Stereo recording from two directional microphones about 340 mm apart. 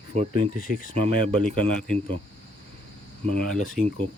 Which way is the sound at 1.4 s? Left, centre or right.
Centre.